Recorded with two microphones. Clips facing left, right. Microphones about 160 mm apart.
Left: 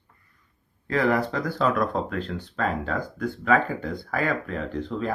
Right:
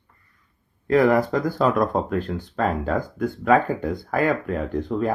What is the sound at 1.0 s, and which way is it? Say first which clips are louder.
Speech: right 5 dB; 45° right (ahead or behind).